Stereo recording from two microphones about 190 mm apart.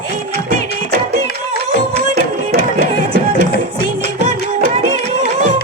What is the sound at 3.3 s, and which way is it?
Music, 70° left (ahead or behind).